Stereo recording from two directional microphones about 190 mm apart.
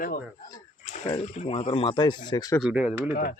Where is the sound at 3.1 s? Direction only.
50° left (ahead or behind).